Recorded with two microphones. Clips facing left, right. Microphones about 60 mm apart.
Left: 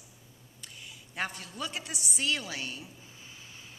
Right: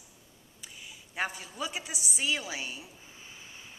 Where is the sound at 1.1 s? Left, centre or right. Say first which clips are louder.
Right 1 dB; centre.